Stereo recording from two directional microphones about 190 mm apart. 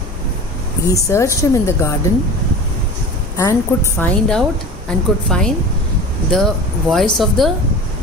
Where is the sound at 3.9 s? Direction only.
5° left (ahead or behind).